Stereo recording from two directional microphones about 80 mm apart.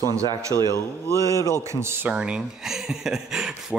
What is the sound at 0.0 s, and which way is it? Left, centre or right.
A man's voice, right.